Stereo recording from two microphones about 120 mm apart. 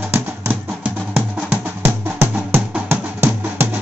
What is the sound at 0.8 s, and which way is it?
Music, 10° right (ahead or behind).